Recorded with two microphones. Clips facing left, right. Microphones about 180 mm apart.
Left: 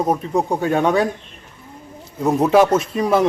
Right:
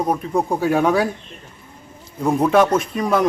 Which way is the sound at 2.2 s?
5° left (ahead or behind).